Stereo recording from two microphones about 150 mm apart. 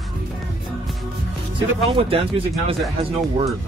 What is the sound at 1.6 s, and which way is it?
Speech, 40° right (ahead or behind).